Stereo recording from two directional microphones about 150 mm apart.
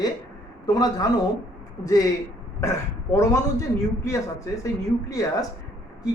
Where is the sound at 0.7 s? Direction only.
25° left (ahead or behind).